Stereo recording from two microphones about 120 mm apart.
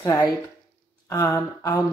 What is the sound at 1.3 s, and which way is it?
Speech, 30° left (ahead or behind).